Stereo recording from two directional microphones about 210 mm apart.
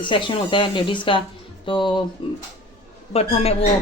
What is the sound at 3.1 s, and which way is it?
Speech, 30° left (ahead or behind).